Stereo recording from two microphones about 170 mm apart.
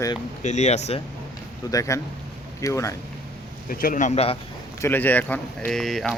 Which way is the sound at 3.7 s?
55° left (ahead or behind).